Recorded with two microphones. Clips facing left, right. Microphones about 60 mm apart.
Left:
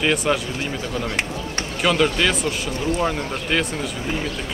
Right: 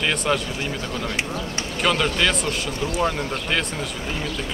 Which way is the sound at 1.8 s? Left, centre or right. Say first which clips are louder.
Left 2 dB; centre.